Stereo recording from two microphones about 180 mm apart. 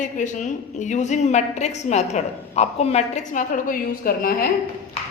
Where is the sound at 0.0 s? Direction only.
45° left (ahead or behind).